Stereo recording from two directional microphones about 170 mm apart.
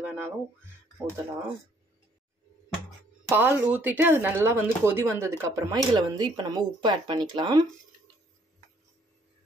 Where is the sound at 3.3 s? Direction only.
10° right (ahead or behind).